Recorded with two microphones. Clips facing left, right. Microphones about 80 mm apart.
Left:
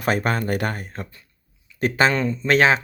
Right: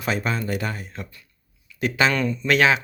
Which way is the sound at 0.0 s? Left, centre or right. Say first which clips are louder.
Left 3 dB; left.